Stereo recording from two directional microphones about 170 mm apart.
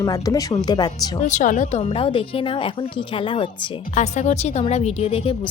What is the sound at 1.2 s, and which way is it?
Speech, 45° left (ahead or behind).